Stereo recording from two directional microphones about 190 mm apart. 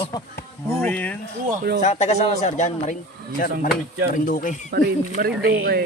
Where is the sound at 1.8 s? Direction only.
35° left (ahead or behind).